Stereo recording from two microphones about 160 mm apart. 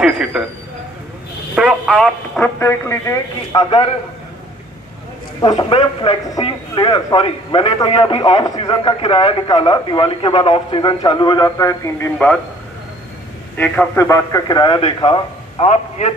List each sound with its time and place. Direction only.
0.0 s speech: 5° right (ahead or behind)
1.6 s speech: 5° right (ahead or behind)
2.6 s speech: 15° left (ahead or behind)
5.4 s speech: 30° left (ahead or behind)
13.6 s a man's voice: 15° left (ahead or behind); by 16.1 s 40° left (ahead or behind)